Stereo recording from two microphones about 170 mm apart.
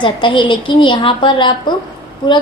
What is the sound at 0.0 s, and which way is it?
A woman's voice, 30° left (ahead or behind).